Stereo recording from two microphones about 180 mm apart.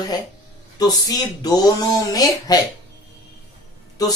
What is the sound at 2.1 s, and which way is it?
Speech, 20° left (ahead or behind).